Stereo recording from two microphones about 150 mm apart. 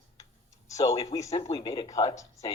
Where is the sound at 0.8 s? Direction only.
40° left (ahead or behind).